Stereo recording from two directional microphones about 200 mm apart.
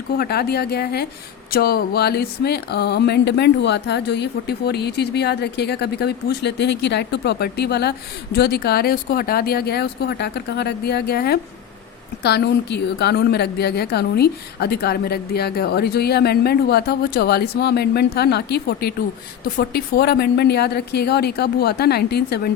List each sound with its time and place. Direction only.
0.2 s a woman's voice: 50° left (ahead or behind)